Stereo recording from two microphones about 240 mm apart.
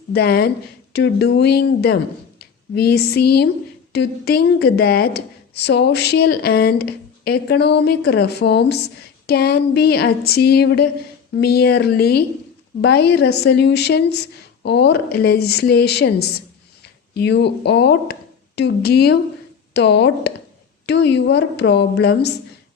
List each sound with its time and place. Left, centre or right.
0.1 s a woman's voice: left